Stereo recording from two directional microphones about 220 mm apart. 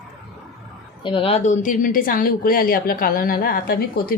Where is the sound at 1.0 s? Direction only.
25° left (ahead or behind).